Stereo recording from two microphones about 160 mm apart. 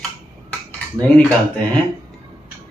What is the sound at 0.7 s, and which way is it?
Speech, 10° left (ahead or behind).